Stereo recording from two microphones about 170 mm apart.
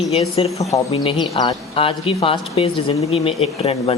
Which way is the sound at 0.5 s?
20° left (ahead or behind).